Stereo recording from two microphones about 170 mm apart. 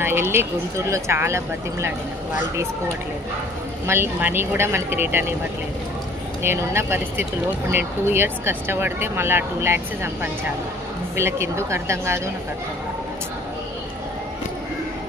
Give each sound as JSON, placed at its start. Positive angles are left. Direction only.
{"t": 0.0, "sound": "speech", "side_deg": -15}
{"t": 3.8, "sound": "speech", "side_deg": -15}
{"t": 6.4, "sound": "speech", "side_deg": -15}